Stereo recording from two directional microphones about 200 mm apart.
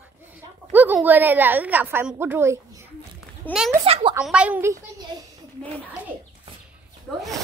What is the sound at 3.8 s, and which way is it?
Speech, 30° right (ahead or behind).